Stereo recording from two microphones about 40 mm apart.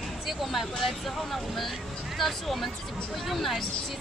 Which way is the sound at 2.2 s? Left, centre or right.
Centre.